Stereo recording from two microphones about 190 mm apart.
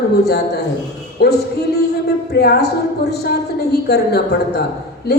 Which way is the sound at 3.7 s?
60° left (ahead or behind).